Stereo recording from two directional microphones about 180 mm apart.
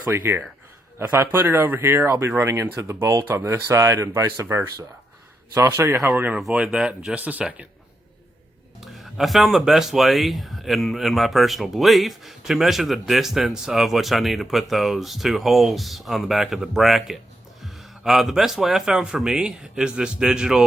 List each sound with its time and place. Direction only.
0.1 s speech: 10° right (ahead or behind)
8.8 s speech: centre (ahead or behind)